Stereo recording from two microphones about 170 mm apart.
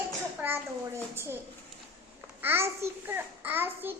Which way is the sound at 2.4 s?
15° right (ahead or behind).